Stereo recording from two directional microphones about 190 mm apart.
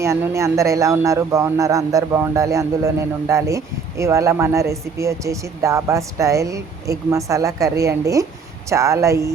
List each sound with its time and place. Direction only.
0.0 s speech: 15° right (ahead or behind)